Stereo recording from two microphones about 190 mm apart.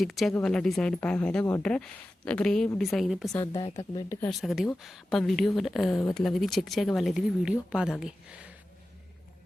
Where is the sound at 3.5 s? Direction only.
30° left (ahead or behind).